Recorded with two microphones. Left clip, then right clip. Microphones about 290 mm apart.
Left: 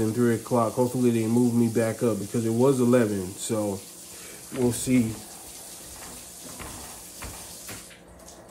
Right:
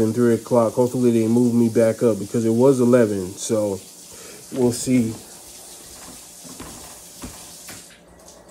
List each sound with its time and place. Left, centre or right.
0.0 s speech: centre